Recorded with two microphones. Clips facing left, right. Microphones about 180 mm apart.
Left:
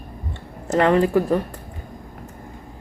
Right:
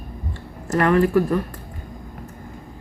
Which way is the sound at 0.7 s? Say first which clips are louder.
Even; 25° left (ahead or behind).